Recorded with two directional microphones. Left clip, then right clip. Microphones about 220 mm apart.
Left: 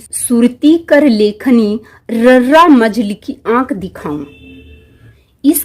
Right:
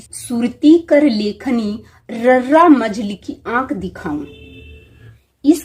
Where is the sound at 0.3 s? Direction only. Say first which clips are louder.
Left 2 dB; 55° left (ahead or behind).